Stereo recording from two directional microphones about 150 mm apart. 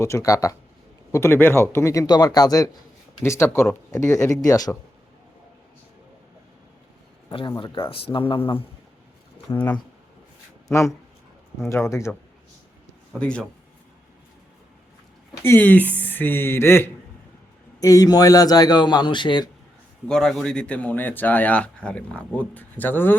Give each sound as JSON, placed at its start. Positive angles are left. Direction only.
{"t": 0.0, "sound": "a man's voice", "side_deg": 20}
{"t": 7.3, "sound": "speech", "side_deg": 30}
{"t": 9.5, "sound": "a man's voice", "side_deg": 25}
{"t": 10.7, "sound": "a man's voice", "side_deg": 20}
{"t": 13.1, "sound": "speech", "side_deg": 5}
{"t": 15.4, "sound": "a man's voice", "side_deg": 10}
{"t": 20.1, "sound": "speech", "side_deg": 5}